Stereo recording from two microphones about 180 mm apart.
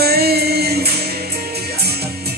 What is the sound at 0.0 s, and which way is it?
Music, 60° right (ahead or behind).